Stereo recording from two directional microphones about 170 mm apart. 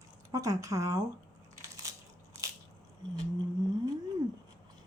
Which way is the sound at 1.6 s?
20° right (ahead or behind).